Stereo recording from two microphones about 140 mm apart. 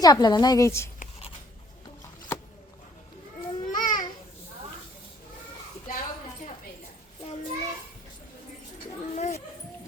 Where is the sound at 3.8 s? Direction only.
70° left (ahead or behind).